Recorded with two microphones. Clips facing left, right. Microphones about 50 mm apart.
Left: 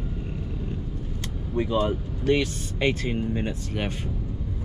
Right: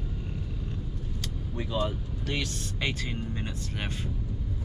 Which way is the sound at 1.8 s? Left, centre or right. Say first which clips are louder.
Left 8 dB; centre.